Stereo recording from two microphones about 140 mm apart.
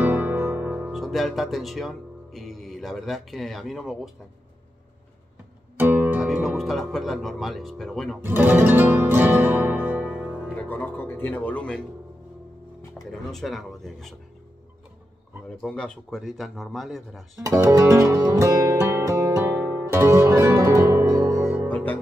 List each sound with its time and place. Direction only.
0.0 s music: 10° right (ahead or behind)
0.9 s speech: centre (ahead or behind)
5.8 s music: 15° right (ahead or behind)
6.2 s speech: centre (ahead or behind)
8.2 s music: 15° right (ahead or behind)
10.5 s speech: 15° left (ahead or behind)
13.1 s speech: centre (ahead or behind)
15.5 s speech: 5° left (ahead or behind)
17.5 s music: 20° right (ahead or behind)
21.6 s music: 10° left (ahead or behind)